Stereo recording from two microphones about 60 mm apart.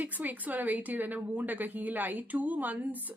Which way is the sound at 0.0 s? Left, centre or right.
Right.